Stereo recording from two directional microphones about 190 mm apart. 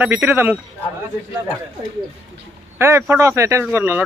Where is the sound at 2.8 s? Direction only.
15° right (ahead or behind).